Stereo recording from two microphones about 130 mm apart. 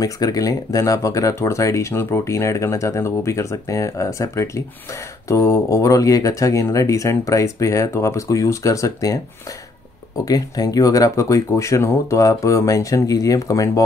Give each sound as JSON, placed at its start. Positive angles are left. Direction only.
{"t": 0.0, "sound": "speech", "side_deg": 30}